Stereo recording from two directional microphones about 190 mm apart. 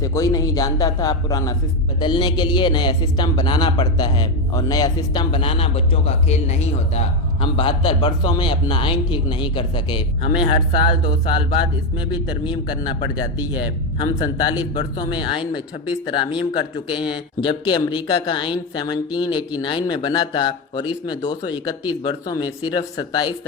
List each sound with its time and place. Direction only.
0.0 s a man's voice: 15° left (ahead or behind)
22.0 s a man's voice: 20° left (ahead or behind)